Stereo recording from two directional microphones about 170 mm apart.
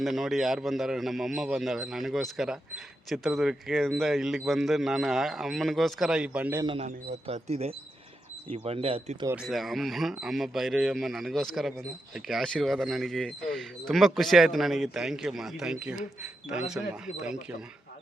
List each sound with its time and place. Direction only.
0.0 s a man's voice: centre (ahead or behind)
6.7 s speech: 40° right (ahead or behind)
9.3 s a man's voice: 5° right (ahead or behind)